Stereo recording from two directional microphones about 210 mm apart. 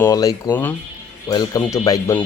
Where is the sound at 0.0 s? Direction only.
15° left (ahead or behind).